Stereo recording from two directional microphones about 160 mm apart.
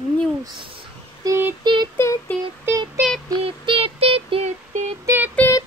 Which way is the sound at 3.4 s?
35° right (ahead or behind).